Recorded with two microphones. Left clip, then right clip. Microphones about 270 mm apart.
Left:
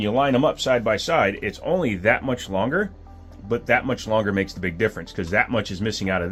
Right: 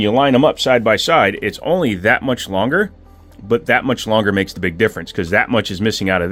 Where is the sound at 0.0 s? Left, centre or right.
Right.